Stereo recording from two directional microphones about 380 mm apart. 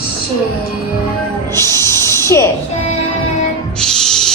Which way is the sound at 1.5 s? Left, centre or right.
Centre.